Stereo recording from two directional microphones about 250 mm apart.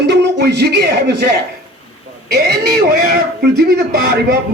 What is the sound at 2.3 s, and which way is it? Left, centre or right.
A man's voice, right.